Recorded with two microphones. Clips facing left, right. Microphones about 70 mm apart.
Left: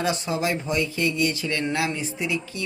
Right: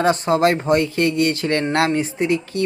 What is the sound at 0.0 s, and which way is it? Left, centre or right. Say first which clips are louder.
Speech: right 9 dB; right.